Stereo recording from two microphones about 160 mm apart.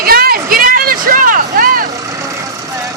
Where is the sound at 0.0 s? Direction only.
70° right (ahead or behind).